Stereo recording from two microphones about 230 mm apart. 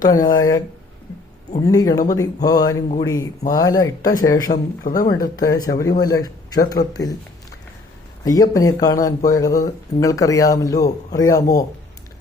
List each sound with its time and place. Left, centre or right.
0.0 s speech: centre
1.5 s speech: centre
4.5 s speech: left
4.9 s a man's voice: centre
8.2 s speech: centre